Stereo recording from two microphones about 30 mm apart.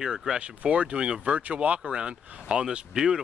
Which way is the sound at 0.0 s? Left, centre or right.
Right.